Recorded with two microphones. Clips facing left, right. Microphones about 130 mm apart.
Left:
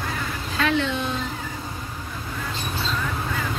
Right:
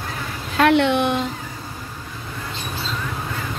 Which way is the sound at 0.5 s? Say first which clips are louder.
Right 8 dB; 65° right (ahead or behind).